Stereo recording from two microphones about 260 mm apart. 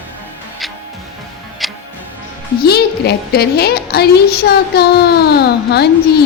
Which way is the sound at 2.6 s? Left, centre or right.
Left.